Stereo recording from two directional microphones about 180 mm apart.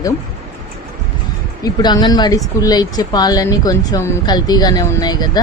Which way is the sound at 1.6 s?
25° left (ahead or behind).